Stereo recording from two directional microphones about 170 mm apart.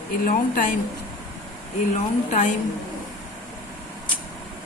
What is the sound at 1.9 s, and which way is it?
Speech, 45° left (ahead or behind).